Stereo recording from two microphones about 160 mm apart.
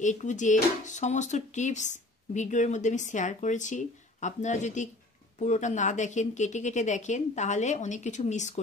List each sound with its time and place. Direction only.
0.0 s speech: 50° left (ahead or behind)